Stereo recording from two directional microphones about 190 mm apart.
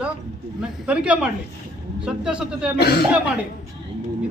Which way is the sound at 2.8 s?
60° left (ahead or behind).